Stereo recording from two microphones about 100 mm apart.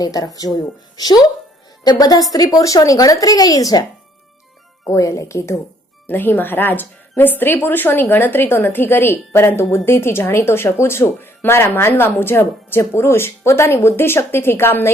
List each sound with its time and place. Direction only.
0.0 s speech: 40° left (ahead or behind)
4.9 s speech: 30° left (ahead or behind)
6.1 s a woman's voice: 20° left (ahead or behind)